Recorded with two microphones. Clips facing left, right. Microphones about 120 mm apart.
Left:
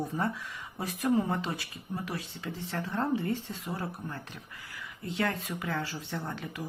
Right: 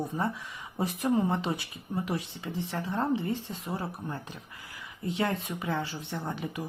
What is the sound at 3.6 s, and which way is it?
Speech, 30° right (ahead or behind).